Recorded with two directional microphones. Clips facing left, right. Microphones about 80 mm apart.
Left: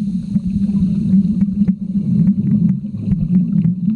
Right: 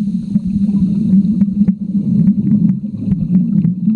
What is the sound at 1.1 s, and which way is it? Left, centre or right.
Vehicle, centre.